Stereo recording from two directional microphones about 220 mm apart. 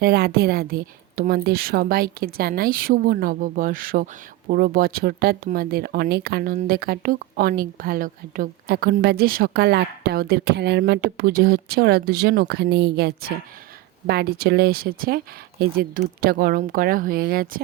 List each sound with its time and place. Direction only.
0.0 s speech: 45° right (ahead or behind)